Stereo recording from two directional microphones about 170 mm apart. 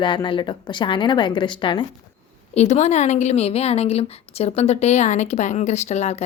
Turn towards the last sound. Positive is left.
turn(degrees=40)  # may be behind; listen again after turning